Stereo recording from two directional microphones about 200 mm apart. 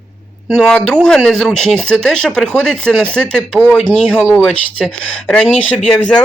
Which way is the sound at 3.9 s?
5° left (ahead or behind).